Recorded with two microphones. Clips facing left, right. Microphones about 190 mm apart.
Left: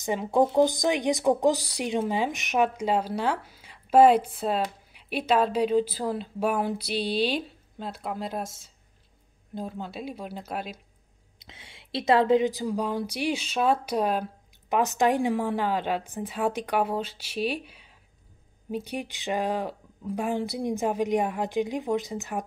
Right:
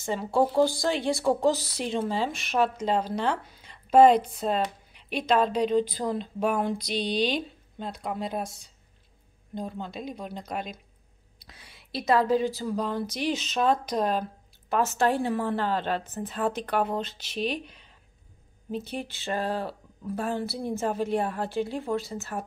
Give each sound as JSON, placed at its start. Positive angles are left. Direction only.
{"t": 0.0, "sound": "a woman's voice", "side_deg": 15}
{"t": 11.3, "sound": "a woman's voice", "side_deg": 25}